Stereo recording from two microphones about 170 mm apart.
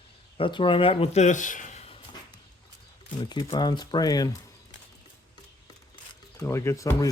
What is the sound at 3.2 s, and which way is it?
Speech, 25° left (ahead or behind).